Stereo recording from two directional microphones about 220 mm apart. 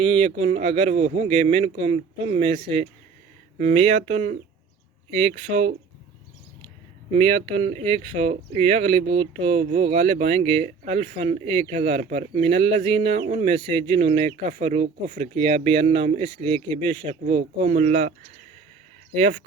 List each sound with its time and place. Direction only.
0.0 s speech: 25° right (ahead or behind)
5.5 s speech: 25° right (ahead or behind)
7.1 s speech: 30° right (ahead or behind)